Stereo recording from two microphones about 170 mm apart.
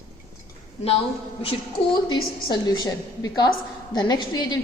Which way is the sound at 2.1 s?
25° left (ahead or behind).